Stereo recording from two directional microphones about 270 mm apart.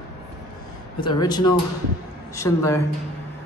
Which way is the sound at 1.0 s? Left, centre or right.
Centre.